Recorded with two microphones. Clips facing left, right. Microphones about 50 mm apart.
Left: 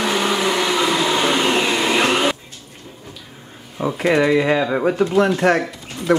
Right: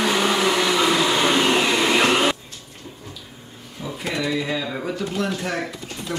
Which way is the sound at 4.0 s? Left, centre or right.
Left.